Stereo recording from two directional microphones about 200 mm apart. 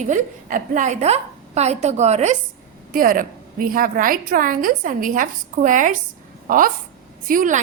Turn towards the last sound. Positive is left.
turn(degrees=-40)  # may be behind; listen again after turning